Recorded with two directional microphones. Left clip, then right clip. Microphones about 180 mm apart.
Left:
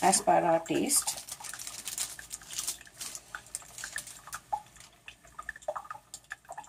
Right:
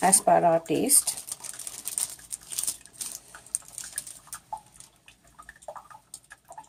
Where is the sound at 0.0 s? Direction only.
45° right (ahead or behind).